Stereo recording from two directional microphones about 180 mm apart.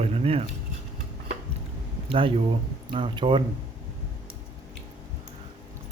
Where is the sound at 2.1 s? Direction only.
30° right (ahead or behind).